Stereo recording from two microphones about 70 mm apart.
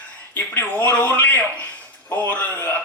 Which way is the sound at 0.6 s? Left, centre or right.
Left.